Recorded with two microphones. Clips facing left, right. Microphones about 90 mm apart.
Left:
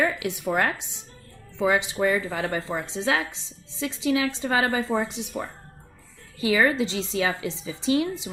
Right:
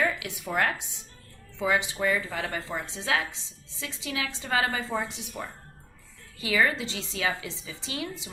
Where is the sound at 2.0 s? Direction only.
35° left (ahead or behind).